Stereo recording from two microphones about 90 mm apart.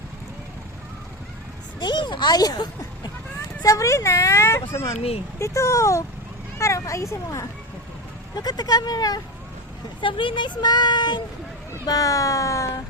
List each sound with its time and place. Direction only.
1.8 s speech: 60° left (ahead or behind); by 7.4 s 35° left (ahead or behind)
8.4 s speech: 45° left (ahead or behind)
10.0 s speech: 70° left (ahead or behind)
11.9 s speech: 40° left (ahead or behind)